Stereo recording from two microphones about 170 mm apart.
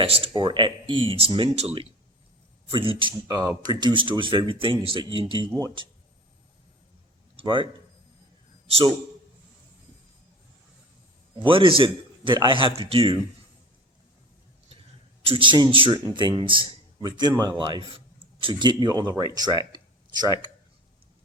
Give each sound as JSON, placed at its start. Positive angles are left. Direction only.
{"t": 0.0, "sound": "a man's voice", "side_deg": -30}
{"t": 7.3, "sound": "a man's voice", "side_deg": -30}
{"t": 11.3, "sound": "speech", "side_deg": -30}
{"t": 15.2, "sound": "a man's voice", "side_deg": -30}
{"t": 19.7, "sound": "a sound", "side_deg": -25}